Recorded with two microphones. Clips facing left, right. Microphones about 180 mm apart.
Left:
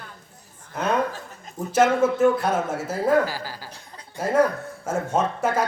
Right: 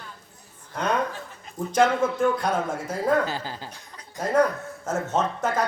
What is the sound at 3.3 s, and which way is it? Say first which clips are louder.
Speech: right 1 dB; 20° right (ahead or behind).